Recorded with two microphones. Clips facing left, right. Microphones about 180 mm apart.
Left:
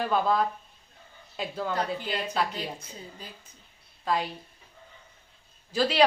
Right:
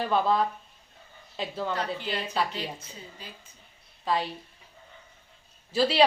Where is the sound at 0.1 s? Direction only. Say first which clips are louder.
Right 2 dB; 5° left (ahead or behind).